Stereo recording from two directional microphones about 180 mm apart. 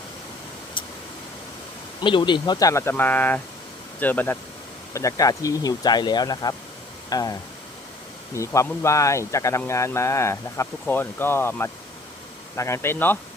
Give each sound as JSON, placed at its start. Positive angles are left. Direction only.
{"t": 2.0, "sound": "speech", "side_deg": 25}
{"t": 8.4, "sound": "speech", "side_deg": 15}